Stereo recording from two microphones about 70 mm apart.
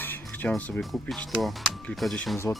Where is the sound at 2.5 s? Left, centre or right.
Left.